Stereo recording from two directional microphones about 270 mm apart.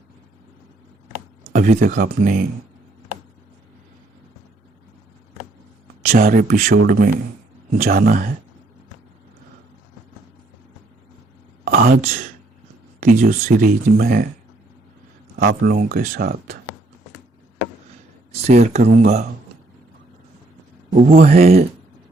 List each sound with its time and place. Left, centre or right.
1.5 s speech: right
6.1 s speech: right
11.6 s a sound: right
13.0 s speech: right
15.4 s speech: right
18.4 s speech: right
20.9 s speech: right